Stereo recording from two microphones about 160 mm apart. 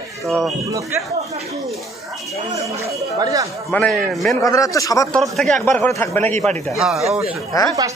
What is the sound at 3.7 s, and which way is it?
Speech, 5° left (ahead or behind).